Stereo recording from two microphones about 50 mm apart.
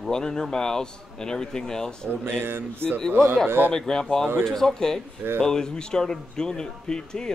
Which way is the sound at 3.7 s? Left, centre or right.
Centre.